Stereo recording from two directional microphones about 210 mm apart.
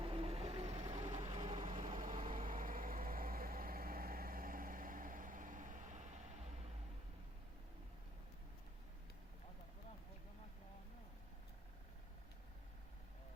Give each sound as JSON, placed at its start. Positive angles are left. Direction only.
{"t": 0.0, "sound": "vehicle", "side_deg": -25}
{"t": 1.5, "sound": "vehicle", "side_deg": -40}